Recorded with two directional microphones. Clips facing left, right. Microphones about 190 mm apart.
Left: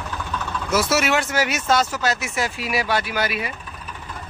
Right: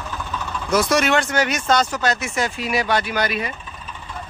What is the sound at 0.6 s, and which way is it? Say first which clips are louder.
Speech: right 2 dB; 5° left (ahead or behind).